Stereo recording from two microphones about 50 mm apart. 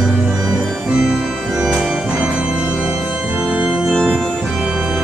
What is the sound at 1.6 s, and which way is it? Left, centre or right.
Organ, centre.